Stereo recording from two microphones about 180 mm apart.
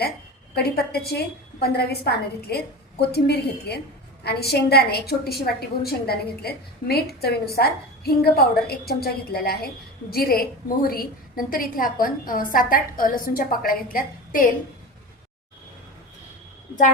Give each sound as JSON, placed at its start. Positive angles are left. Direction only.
{"t": 0.5, "sound": "a woman's voice", "side_deg": 60}